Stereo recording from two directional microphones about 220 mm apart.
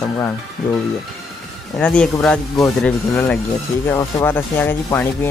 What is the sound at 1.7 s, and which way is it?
Speech, 5° left (ahead or behind).